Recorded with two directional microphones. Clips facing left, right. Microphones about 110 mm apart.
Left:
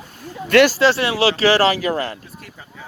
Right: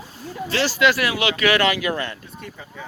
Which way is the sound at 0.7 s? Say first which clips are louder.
Left 2 dB; 30° left (ahead or behind).